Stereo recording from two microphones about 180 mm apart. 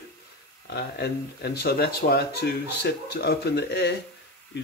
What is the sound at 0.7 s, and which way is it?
Speech, 60° left (ahead or behind).